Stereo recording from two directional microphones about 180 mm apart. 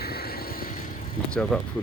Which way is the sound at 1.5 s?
Centre (ahead or behind).